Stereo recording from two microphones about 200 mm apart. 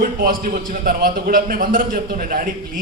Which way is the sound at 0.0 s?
45° right (ahead or behind).